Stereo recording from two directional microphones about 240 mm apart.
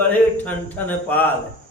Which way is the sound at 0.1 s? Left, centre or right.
Centre.